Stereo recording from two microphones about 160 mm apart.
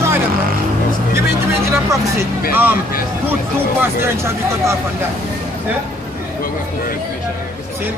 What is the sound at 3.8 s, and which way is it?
A man's voice, 15° right (ahead or behind).